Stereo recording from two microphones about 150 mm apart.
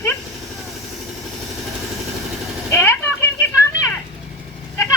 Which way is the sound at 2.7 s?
15° left (ahead or behind).